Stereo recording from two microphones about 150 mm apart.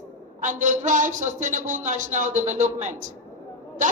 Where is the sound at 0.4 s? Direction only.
55° right (ahead or behind).